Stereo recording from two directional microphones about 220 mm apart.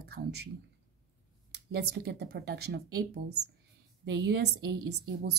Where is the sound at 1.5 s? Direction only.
50° right (ahead or behind).